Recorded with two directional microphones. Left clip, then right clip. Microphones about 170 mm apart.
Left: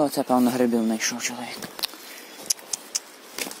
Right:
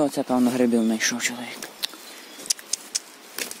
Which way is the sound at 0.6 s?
35° right (ahead or behind).